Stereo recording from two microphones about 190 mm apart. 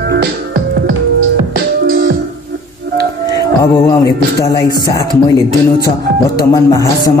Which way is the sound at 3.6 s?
15° left (ahead or behind).